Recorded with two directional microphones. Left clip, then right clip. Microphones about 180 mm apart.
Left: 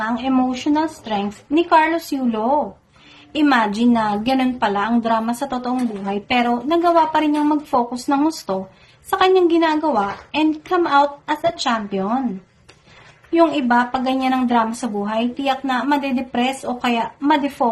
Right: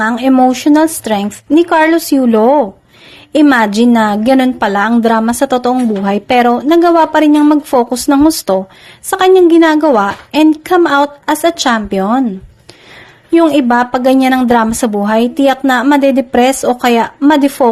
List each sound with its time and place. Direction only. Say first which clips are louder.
0.0 s a woman's voice: right 10 dB; 45° right (ahead or behind)
13.3 s a woman's voice: right 7 dB; 45° right (ahead or behind)